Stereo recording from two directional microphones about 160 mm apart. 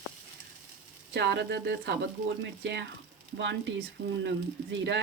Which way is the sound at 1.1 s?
90° right.